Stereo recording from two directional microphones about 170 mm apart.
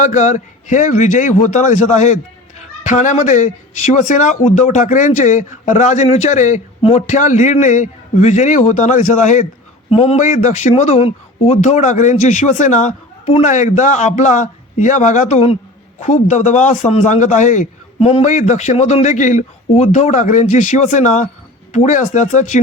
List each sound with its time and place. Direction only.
0.0 s speech: 45° left (ahead or behind)